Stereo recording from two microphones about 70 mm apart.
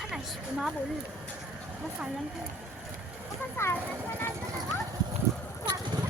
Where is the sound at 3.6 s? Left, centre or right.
Left.